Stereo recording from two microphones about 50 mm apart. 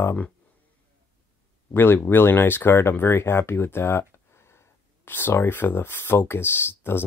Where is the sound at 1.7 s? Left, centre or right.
Left.